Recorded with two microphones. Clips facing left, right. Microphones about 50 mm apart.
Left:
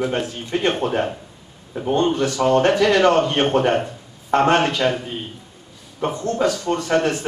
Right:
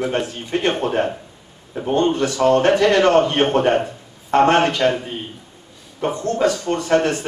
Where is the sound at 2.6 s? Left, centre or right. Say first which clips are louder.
Right 2 dB; right.